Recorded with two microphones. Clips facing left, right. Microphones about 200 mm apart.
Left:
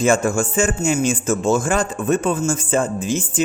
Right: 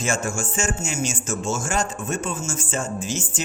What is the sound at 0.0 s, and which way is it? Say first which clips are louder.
Speech: left 9 dB; 55° left (ahead or behind).